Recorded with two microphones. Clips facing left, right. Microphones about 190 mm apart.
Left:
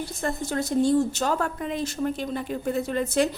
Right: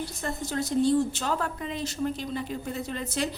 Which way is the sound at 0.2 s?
50° left (ahead or behind).